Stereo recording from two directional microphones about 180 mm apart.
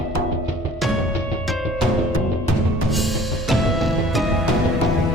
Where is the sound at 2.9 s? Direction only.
Centre (ahead or behind).